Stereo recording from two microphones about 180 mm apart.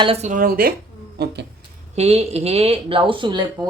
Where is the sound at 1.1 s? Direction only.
65° right (ahead or behind).